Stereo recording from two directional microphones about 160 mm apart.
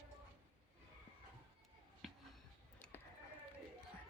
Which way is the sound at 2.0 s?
Centre (ahead or behind).